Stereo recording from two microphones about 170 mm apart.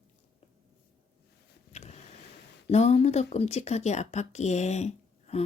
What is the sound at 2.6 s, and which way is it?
Speech, 40° left (ahead or behind).